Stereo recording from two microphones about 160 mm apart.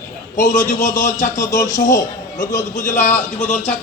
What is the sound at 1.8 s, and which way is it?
A man's voice, 55° left (ahead or behind).